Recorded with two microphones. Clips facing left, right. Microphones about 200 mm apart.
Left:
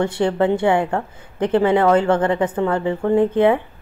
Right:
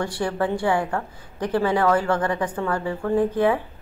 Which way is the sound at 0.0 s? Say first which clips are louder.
Left 6 dB; 20° left (ahead or behind).